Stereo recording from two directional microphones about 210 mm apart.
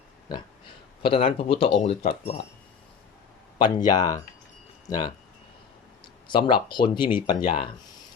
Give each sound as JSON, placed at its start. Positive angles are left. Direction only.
{"t": 1.0, "sound": "speech", "side_deg": 25}
{"t": 3.6, "sound": "speech", "side_deg": 20}
{"t": 6.2, "sound": "speech", "side_deg": 20}